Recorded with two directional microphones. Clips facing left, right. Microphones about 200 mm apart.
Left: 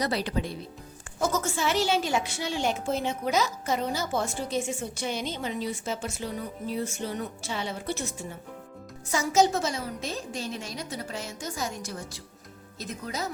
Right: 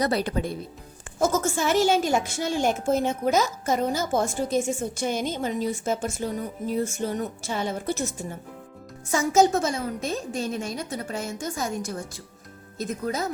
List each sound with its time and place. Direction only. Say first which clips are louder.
0.0 s a woman's voice: right 4 dB; 50° right (ahead or behind)